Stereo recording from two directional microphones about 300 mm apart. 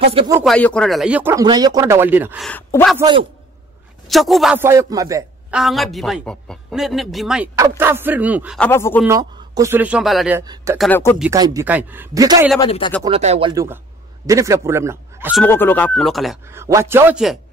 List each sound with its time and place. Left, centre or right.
0.0 s speech: centre
0.4 s a man's voice: centre
3.0 s speech: centre
4.1 s a man's voice: centre
9.0 s speech: centre
10.9 s speech: centre
11.2 s speech: centre
12.5 s speech: centre
13.0 s speech: centre
15.4 s a man's voice: centre